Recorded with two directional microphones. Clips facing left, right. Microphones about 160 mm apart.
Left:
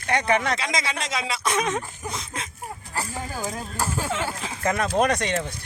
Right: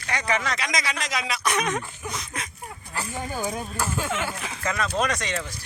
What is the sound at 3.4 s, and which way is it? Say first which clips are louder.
Speech: right 3 dB; centre (ahead or behind).